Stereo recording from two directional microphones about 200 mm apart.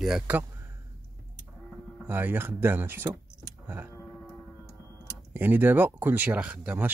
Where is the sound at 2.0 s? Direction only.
10° right (ahead or behind).